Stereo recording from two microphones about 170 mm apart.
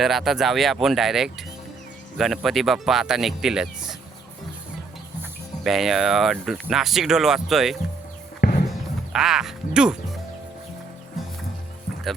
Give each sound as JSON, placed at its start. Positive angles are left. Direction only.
{"t": 0.0, "sound": "speech", "side_deg": 0}
{"t": 5.6, "sound": "speech", "side_deg": 0}
{"t": 8.4, "sound": "music", "side_deg": 65}
{"t": 9.1, "sound": "speech", "side_deg": -5}